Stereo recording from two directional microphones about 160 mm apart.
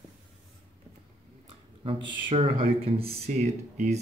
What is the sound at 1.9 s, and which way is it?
Speech, 35° right (ahead or behind).